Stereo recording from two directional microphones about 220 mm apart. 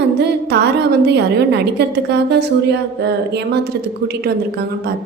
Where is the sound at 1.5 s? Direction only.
50° right (ahead or behind).